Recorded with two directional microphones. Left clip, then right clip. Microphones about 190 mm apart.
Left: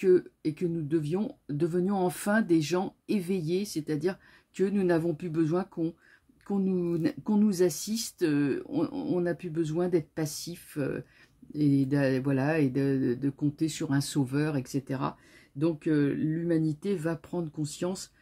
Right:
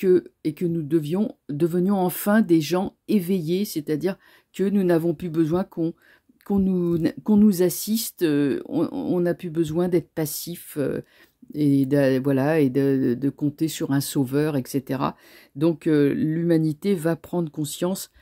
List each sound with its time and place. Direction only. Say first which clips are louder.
0.0 s speech: right 4 dB; 40° right (ahead or behind)